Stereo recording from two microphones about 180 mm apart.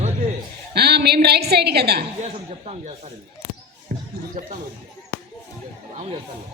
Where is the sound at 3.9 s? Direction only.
50° right (ahead or behind).